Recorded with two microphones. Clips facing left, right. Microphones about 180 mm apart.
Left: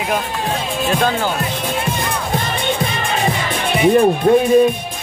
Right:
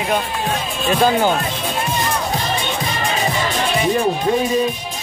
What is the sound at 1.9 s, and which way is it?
Music, 55° left (ahead or behind).